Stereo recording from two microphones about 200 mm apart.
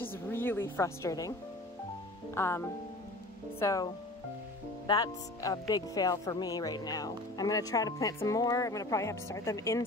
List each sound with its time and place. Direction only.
0.0 s a woman's voice: 10° left (ahead or behind)
2.3 s speech: 15° left (ahead or behind)